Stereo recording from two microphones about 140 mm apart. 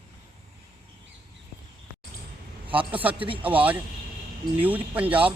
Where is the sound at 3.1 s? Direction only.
40° right (ahead or behind).